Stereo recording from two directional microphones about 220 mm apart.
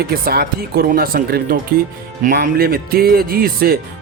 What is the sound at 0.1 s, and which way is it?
Speech, 45° right (ahead or behind).